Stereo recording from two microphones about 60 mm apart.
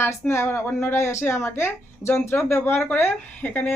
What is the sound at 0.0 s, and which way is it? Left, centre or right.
Speech, left.